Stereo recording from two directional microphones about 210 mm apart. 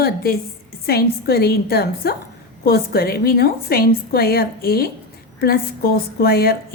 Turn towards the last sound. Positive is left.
turn(degrees=45)  # may be behind; listen again after turning